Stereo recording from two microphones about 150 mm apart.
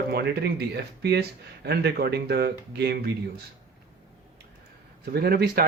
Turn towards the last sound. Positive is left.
turn(degrees=-85)